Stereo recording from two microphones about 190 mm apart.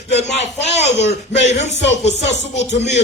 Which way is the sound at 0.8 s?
35° left (ahead or behind).